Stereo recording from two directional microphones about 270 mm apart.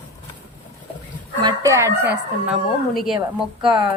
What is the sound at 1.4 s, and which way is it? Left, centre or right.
Speech, centre.